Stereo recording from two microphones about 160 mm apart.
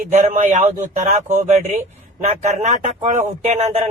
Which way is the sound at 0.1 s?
50° right (ahead or behind).